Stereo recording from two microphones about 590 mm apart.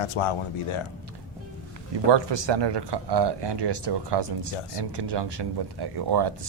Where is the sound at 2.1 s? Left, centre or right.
Right.